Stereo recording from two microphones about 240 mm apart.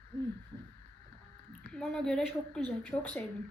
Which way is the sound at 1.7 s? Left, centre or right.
Centre.